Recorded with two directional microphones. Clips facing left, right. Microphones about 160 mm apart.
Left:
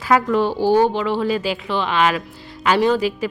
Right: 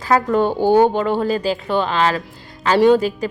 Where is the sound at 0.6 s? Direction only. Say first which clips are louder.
Right 3 dB; 50° right (ahead or behind).